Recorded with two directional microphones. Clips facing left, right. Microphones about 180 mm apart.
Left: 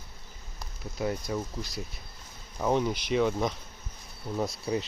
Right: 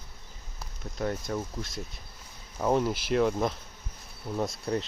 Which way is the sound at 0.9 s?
5° left (ahead or behind).